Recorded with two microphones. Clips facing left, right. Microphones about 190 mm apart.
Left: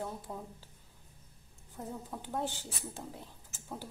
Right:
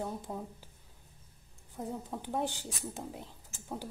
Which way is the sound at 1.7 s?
15° right (ahead or behind).